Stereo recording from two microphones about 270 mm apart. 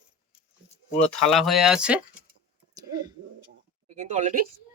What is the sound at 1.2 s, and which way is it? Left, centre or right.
Speech, centre.